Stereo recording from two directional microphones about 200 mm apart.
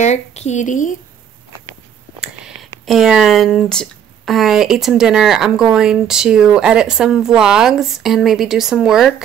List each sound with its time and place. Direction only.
0.0 s a woman's voice: 35° left (ahead or behind)
2.1 s speech: 5° right (ahead or behind)